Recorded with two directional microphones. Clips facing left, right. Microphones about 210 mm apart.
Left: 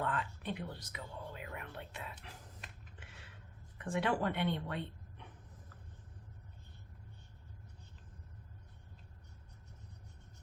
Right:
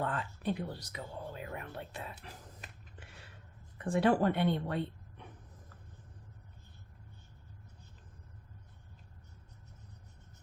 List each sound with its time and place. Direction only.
0.0 s whispering: 40° right (ahead or behind)
3.8 s a woman's voice: 35° right (ahead or behind)